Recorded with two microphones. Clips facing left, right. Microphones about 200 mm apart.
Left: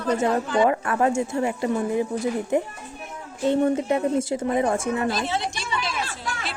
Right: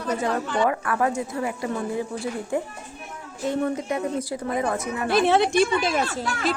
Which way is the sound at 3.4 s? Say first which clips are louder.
Left 4 dB; 30° left (ahead or behind).